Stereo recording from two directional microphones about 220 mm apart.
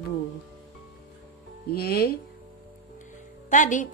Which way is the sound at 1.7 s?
45° left (ahead or behind).